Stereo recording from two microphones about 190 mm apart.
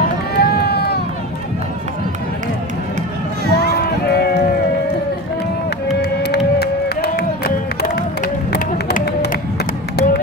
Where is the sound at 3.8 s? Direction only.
55° left (ahead or behind).